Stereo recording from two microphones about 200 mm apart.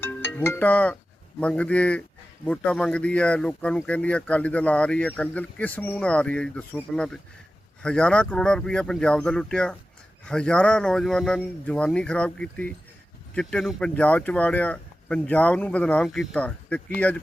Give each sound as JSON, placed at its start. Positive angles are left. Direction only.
{"t": 0.0, "sound": "music", "side_deg": 10}
{"t": 1.4, "sound": "a man's voice", "side_deg": 5}